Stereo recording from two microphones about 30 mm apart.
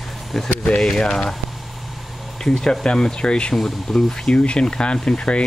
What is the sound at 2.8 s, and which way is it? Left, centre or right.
Speech, left.